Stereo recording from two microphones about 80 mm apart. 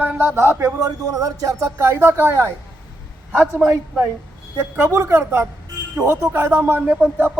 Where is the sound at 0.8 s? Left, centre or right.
Right.